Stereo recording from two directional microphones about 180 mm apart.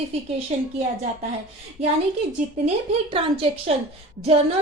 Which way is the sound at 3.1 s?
30° right (ahead or behind).